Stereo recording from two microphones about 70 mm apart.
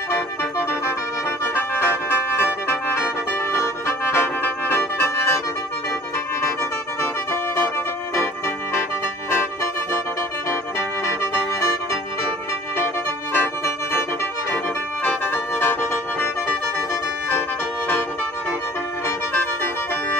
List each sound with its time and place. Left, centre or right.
1.4 s music: left
9.3 s music: left
13.3 s music: left
15.0 s music: left
19.0 s music: left